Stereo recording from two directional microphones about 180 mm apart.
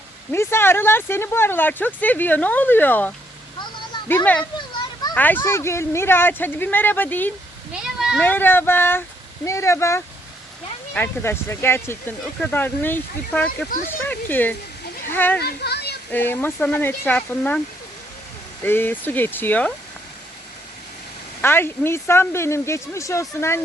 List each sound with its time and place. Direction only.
0.3 s speech: 15° left (ahead or behind)
4.1 s speech: 10° left (ahead or behind)
7.7 s a sound: 5° right (ahead or behind)
8.2 s speech: 10° left (ahead or behind)
15.4 s speech: 65° left (ahead or behind)
16.1 s speech: 10° left (ahead or behind)
18.6 s speech: 10° left (ahead or behind)
21.4 s speech: 15° left (ahead or behind)